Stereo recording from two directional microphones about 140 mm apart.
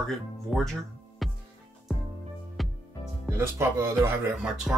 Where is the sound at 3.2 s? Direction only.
15° right (ahead or behind).